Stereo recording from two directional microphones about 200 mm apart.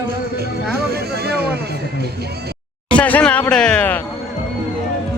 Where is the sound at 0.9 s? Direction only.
50° right (ahead or behind).